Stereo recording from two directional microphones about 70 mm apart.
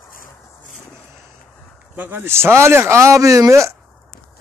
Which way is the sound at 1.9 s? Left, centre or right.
Right.